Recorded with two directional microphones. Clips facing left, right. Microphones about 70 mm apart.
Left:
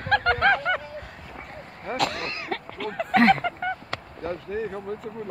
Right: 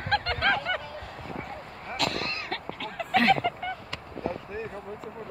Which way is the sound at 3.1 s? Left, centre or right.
Left.